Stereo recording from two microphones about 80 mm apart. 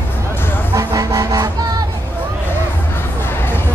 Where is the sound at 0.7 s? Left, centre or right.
Right.